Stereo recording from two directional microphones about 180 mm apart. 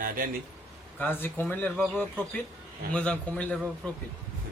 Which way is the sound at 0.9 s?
10° left (ahead or behind).